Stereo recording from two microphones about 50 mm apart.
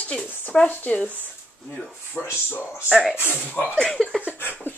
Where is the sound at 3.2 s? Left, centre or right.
Left.